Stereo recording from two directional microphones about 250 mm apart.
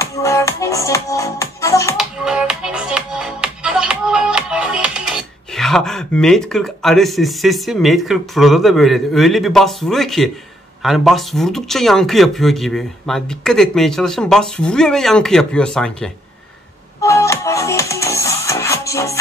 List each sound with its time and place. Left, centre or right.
0.0 s music: centre
2.0 s music: centre
10.8 s speech: centre
17.0 s music: centre